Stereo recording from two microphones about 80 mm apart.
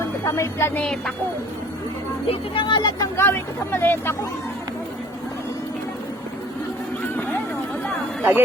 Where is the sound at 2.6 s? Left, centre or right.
Left.